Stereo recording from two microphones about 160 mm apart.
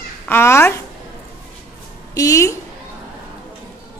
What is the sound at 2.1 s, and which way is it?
Speech, 20° left (ahead or behind).